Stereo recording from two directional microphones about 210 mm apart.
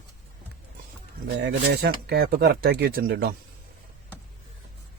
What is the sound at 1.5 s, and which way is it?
Speech, 50° right (ahead or behind).